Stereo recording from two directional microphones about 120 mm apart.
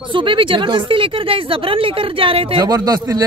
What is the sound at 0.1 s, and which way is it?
Speech, 45° right (ahead or behind).